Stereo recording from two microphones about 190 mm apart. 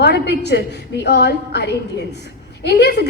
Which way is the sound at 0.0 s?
60° left (ahead or behind).